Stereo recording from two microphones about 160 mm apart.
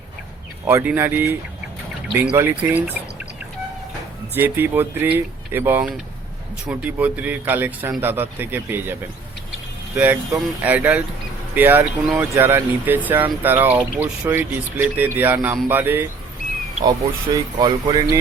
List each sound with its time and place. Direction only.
0.7 s speech: 15° right (ahead or behind)
4.4 s speech: 15° right (ahead or behind)
10.0 s speech: 10° right (ahead or behind)
17.6 s speech: 25° right (ahead or behind)